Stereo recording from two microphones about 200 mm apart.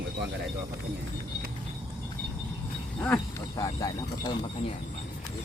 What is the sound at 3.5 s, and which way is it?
Speech, 20° left (ahead or behind).